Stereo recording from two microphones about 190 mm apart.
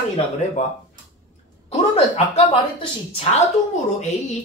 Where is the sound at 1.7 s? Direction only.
35° left (ahead or behind).